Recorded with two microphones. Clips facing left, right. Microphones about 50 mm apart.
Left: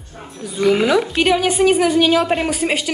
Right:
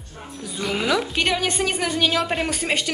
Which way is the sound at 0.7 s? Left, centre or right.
Left.